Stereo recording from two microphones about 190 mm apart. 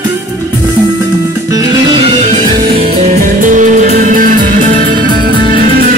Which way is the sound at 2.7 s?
35° right (ahead or behind).